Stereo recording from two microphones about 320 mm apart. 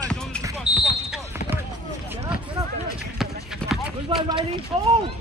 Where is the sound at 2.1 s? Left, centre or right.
Centre.